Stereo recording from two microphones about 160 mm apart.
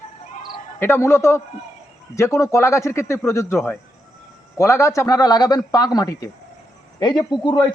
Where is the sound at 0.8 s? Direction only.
15° left (ahead or behind).